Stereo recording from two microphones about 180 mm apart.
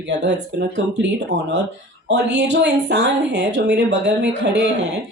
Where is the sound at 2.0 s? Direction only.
75° right (ahead or behind).